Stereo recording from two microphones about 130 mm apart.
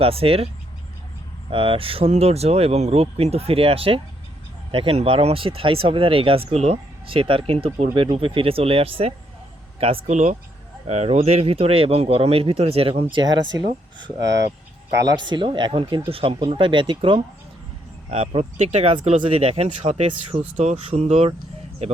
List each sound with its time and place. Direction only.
0.0 s speech: 45° right (ahead or behind)
1.5 s speech: 40° right (ahead or behind)
10.1 s speech: 65° right (ahead or behind); by 13.7 s 35° right (ahead or behind)
14.9 s speech: 30° right (ahead or behind); by 18.4 s 50° right (ahead or behind)
18.5 s speech: 65° right (ahead or behind)